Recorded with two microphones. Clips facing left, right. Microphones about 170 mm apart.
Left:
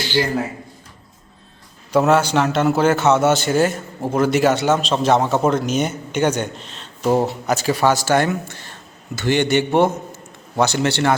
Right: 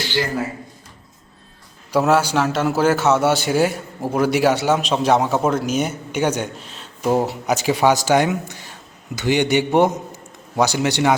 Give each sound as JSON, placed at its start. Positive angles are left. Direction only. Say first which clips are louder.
{"t": 1.9, "sound": "a man's voice", "louder": "left 1 dB", "side_deg": -5}